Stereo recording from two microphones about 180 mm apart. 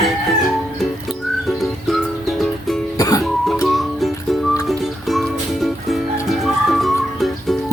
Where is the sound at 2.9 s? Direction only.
20° left (ahead or behind).